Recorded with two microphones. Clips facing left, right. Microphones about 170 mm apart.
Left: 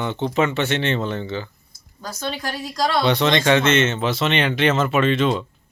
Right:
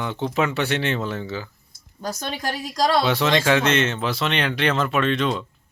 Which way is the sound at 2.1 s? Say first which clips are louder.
Even; 15° right (ahead or behind).